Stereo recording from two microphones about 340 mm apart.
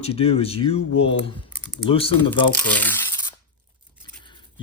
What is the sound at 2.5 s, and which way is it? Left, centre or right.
Speech, centre.